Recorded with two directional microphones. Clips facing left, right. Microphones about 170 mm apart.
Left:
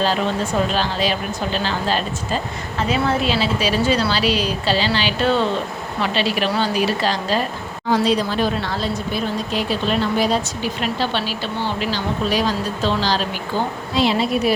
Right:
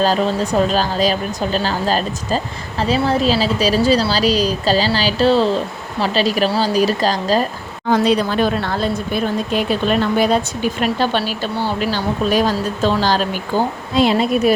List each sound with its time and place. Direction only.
0.0 s speech: 40° right (ahead or behind)
7.9 s speech: 55° right (ahead or behind)